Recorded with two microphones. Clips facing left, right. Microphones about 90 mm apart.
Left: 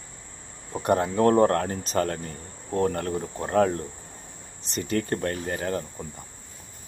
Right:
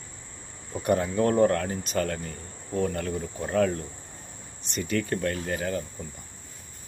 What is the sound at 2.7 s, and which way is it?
Insect, 50° left (ahead or behind).